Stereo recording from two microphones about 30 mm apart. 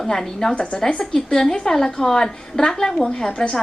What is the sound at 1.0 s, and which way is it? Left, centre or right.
A woman's voice, centre.